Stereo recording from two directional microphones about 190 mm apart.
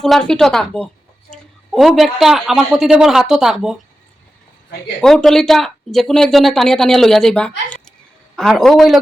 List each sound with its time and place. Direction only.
0.0 s speech: 5° left (ahead or behind)
4.9 s speech: centre (ahead or behind)